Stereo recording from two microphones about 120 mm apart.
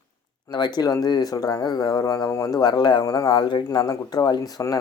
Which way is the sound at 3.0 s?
30° left (ahead or behind).